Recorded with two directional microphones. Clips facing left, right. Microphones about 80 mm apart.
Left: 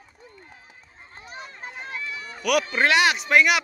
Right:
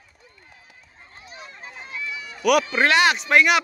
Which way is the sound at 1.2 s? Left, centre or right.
Left.